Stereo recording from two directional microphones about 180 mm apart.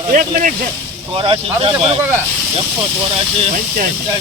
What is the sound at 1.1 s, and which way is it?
Speech, 30° right (ahead or behind).